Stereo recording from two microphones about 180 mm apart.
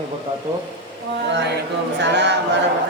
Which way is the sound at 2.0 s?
75° right (ahead or behind).